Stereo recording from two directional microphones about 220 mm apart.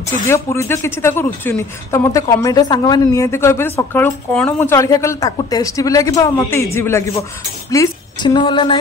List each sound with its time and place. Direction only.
0.3 s a woman's voice: 10° left (ahead or behind)